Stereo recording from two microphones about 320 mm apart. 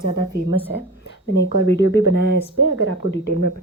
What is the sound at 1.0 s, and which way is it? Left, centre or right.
Speech, left.